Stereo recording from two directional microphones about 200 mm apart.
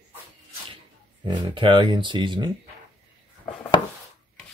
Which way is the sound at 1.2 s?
25° right (ahead or behind).